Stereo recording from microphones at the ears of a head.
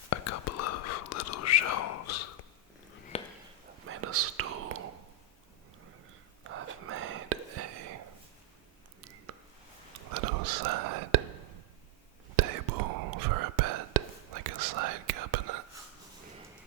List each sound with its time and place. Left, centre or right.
0.1 s whispering: left
3.7 s whispering: right
6.4 s whispering: right